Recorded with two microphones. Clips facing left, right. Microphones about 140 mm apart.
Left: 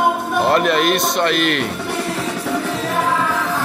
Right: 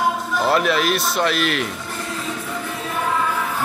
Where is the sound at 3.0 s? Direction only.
90° left.